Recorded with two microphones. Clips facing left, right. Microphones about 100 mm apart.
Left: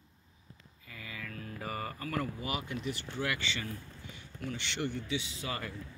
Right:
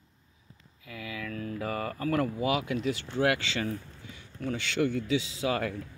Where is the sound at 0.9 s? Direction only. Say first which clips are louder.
Right 7 dB; 75° right (ahead or behind); by 3.6 s 90° right.